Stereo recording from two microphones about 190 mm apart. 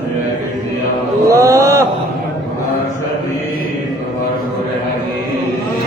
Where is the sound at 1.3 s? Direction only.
15° right (ahead or behind).